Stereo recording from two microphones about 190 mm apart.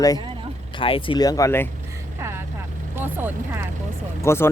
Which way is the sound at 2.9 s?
10° right (ahead or behind).